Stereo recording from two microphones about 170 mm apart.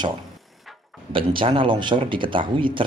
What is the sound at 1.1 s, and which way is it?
Speech, 30° right (ahead or behind).